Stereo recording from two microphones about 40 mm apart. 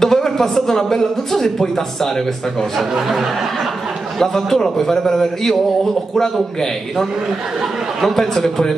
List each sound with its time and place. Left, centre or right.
0.0 s speech: centre
2.9 s speech: centre
4.2 s speech: centre